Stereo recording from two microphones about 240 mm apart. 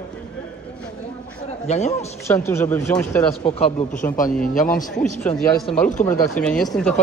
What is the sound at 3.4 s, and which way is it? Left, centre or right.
Speech, left.